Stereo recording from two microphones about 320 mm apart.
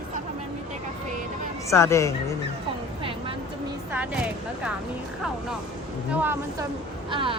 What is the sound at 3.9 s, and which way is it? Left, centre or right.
Speech, centre.